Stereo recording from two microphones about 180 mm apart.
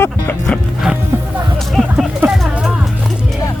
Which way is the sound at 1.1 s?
15° right (ahead or behind).